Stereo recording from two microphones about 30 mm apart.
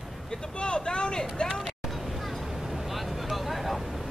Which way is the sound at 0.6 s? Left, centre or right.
Left.